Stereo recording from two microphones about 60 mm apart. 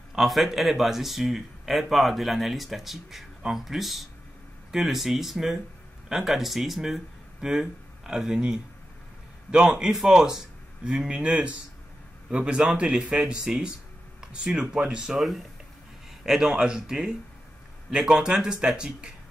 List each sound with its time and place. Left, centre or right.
0.1 s speech: centre
15.1 s speech: centre